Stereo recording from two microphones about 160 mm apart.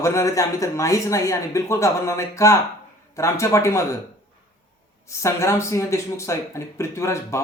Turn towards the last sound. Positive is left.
turn(degrees=15)  # may be behind; listen again after turning